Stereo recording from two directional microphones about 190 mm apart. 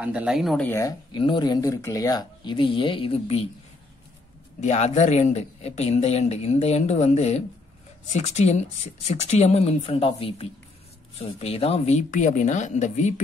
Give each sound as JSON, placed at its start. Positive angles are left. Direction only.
{"t": 0.0, "sound": "speech", "side_deg": -5}
{"t": 0.7, "sound": "speech", "side_deg": 15}
{"t": 4.6, "sound": "speech", "side_deg": 35}